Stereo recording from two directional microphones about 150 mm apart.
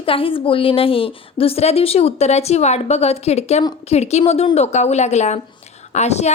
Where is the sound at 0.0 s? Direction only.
35° left (ahead or behind).